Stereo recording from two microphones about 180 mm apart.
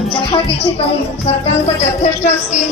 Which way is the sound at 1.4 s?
35° left (ahead or behind).